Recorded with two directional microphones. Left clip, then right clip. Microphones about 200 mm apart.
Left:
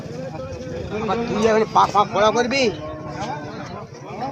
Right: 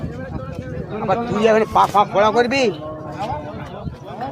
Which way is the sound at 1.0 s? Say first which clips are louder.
Right 3 dB; 35° right (ahead or behind).